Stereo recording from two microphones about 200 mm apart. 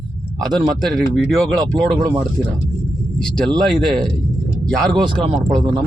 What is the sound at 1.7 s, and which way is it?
Speech, 20° right (ahead or behind).